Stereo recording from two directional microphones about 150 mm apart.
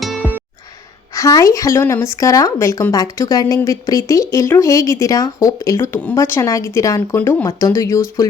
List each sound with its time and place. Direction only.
0.0 s music: centre (ahead or behind)
1.1 s a woman's voice: 20° left (ahead or behind)